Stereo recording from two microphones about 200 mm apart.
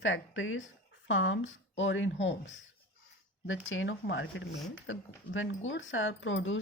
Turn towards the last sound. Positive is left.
turn(degrees=70)  # may be behind; listen again after turning